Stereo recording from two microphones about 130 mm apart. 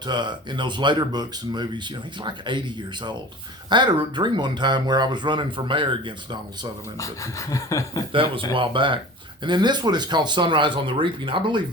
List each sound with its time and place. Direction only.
0.0 s speech: 35° right (ahead or behind)
7.0 s a sound: 25° left (ahead or behind)
8.1 s speech: 40° right (ahead or behind)